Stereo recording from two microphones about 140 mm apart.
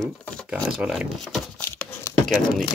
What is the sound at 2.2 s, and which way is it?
Speech, centre (ahead or behind).